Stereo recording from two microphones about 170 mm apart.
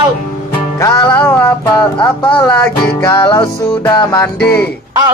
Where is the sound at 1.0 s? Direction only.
5° left (ahead or behind).